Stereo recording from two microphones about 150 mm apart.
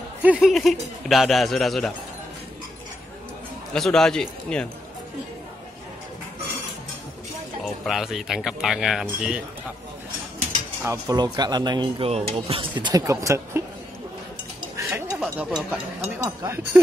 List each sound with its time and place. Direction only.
0.2 s speech: 5° right (ahead or behind)
3.7 s speech: 5° left (ahead or behind)
7.6 s speech: centre (ahead or behind)
10.8 s speech: 20° right (ahead or behind)
12.1 s speech: 40° right (ahead or behind); by 13.6 s 20° right (ahead or behind)
14.8 s a sound: 15° right (ahead or behind)
15.3 s speech: 10° right (ahead or behind)